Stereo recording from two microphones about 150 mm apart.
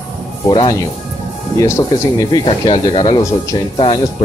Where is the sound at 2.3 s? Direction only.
30° left (ahead or behind).